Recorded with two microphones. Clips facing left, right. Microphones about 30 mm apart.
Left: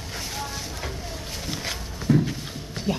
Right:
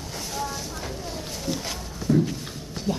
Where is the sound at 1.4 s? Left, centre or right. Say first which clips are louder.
Right 1 dB; centre.